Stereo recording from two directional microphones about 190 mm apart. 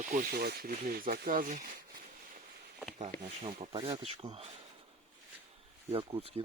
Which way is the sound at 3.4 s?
30° right (ahead or behind).